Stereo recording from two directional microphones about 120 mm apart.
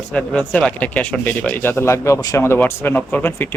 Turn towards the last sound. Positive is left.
turn(degrees=15)  # may be behind; listen again after turning